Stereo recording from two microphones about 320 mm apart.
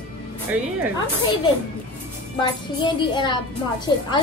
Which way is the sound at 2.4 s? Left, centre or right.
Centre.